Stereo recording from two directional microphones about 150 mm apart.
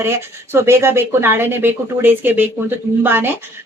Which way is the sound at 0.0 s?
15° right (ahead or behind).